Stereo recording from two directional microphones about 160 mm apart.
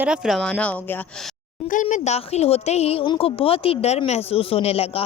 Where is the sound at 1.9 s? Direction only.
45° left (ahead or behind).